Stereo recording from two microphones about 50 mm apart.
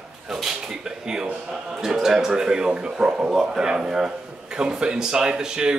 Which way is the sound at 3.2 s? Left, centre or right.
Centre.